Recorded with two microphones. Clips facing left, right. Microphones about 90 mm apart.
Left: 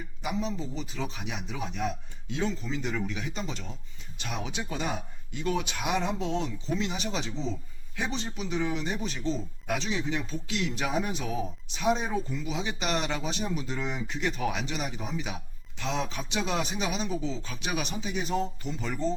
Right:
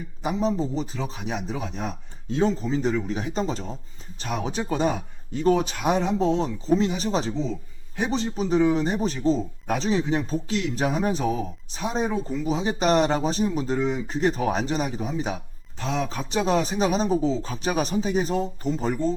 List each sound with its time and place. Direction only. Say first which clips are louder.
0.2 s speech: right 8 dB; 35° right (ahead or behind)